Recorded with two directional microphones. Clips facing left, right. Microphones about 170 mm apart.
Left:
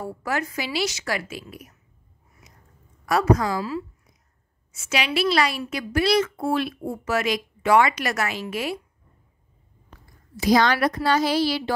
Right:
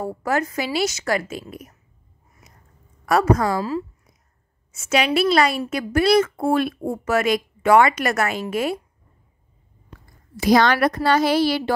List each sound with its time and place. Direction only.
0.0 s a woman's voice: 45° right (ahead or behind)
3.1 s a woman's voice: 50° right (ahead or behind)
10.3 s a woman's voice: 60° right (ahead or behind)